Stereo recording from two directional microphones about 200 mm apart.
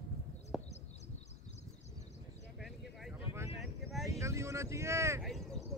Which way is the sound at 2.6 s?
Centre (ahead or behind).